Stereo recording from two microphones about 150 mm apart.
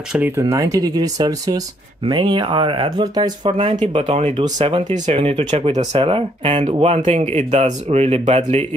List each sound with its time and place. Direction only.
0.4 s speech: 20° right (ahead or behind)
3.9 s speech: 45° right (ahead or behind)
5.9 s speech: 40° right (ahead or behind)